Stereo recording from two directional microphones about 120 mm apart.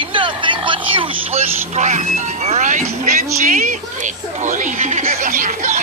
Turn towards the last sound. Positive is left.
turn(degrees=-90)